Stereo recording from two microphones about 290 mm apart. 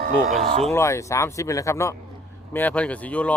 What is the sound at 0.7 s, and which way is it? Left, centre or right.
Speech, centre.